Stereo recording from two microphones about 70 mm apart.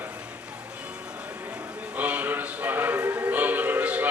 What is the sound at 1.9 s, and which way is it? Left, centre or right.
Music, right.